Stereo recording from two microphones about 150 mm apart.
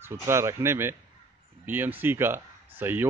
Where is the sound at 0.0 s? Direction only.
15° right (ahead or behind).